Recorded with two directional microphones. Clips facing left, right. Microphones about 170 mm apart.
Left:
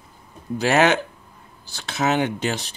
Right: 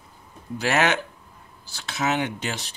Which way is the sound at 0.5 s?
30° left (ahead or behind).